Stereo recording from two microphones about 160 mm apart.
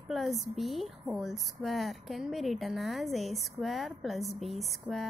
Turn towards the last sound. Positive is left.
turn(degrees=0)  # may be behind; listen again after turning